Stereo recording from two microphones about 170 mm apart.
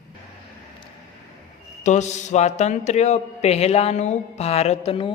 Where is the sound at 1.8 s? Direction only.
45° left (ahead or behind).